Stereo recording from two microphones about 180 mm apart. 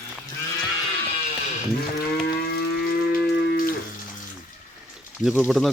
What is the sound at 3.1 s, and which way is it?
Music, 55° left (ahead or behind).